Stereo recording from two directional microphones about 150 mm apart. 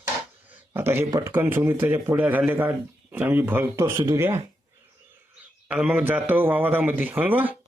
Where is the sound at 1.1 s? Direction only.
25° right (ahead or behind).